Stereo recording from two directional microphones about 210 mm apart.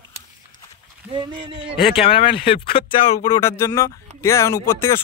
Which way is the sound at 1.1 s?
20° right (ahead or behind).